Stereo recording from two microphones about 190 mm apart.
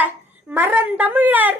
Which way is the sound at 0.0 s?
10° right (ahead or behind).